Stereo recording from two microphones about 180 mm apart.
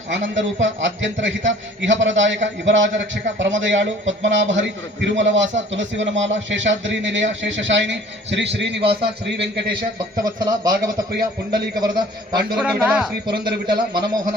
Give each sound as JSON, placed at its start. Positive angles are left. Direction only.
{"t": 0.1, "sound": "a man's voice", "side_deg": -90}
{"t": 10.2, "sound": "a man's voice", "side_deg": -20}
{"t": 11.1, "sound": "a man's voice", "side_deg": -65}
{"t": 11.8, "sound": "a man's voice", "side_deg": -20}
{"t": 12.6, "sound": "speech", "side_deg": -5}
{"t": 13.5, "sound": "a man's voice", "side_deg": -60}